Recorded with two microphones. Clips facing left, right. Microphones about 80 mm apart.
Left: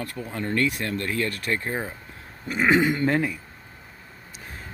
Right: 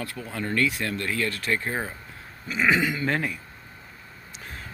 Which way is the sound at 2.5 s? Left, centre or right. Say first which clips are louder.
Left 3 dB; left.